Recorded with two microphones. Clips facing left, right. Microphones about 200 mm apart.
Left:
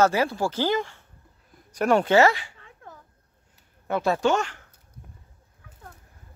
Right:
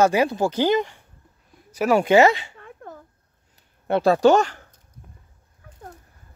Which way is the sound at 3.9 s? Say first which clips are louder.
Right 7 dB; 35° right (ahead or behind).